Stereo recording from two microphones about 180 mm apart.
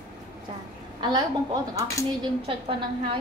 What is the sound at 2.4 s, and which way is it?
Speech, 30° right (ahead or behind).